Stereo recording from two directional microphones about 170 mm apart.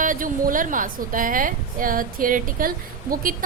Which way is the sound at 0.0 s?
50° right (ahead or behind).